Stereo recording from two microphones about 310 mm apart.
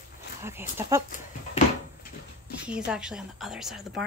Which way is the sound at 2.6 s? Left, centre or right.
Centre.